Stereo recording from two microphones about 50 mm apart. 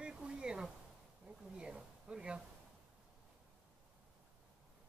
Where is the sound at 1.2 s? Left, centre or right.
Centre.